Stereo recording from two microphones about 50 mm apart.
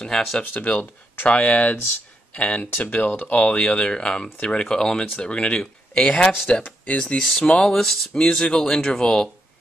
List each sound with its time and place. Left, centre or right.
0.0 s speech: centre
0.4 s speech: left
7.2 s speech: centre
8.3 s speech: centre